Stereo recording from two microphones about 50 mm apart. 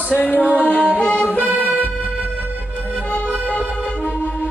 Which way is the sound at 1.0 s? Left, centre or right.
Left.